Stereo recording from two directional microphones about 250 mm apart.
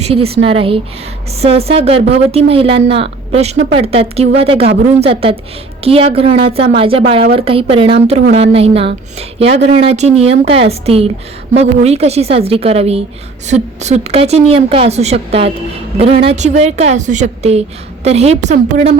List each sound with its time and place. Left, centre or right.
0.0 s a woman's voice: right